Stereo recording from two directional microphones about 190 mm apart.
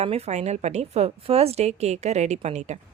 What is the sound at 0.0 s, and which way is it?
A woman's voice, 35° right (ahead or behind).